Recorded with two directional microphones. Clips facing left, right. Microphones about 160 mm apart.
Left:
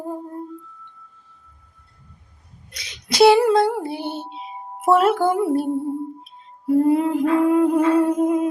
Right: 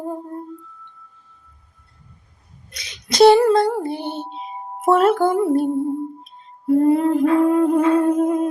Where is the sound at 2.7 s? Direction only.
5° left (ahead or behind).